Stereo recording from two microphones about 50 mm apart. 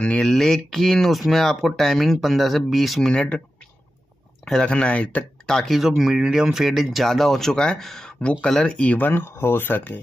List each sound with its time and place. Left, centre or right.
0.2 s speech: centre
3.1 s speech: left
4.6 s speech: left
5.5 s speech: centre
5.8 s speech: centre
8.1 s speech: left
8.7 s speech: left
9.1 s speech: left